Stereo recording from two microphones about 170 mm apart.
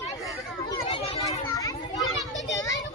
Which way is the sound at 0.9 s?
35° left (ahead or behind).